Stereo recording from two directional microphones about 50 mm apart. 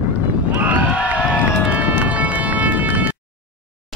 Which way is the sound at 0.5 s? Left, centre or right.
Right.